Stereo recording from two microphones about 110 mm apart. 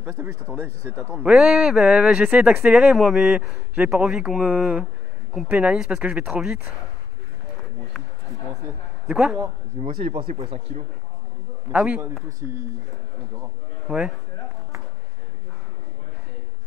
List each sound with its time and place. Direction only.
0.0 s speech: 20° right (ahead or behind)
1.1 s speech: 10° right (ahead or behind)
9.1 s speech: 10° right (ahead or behind)
9.8 s speech: 65° right (ahead or behind)
11.7 s speech: 5° right (ahead or behind)
12.4 s speech: 20° right (ahead or behind)
13.9 s speech: centre (ahead or behind)